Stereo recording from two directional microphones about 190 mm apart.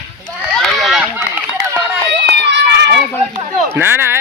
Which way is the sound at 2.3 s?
65° right (ahead or behind).